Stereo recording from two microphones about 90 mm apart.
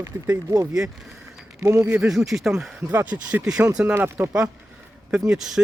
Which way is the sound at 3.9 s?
20° right (ahead or behind).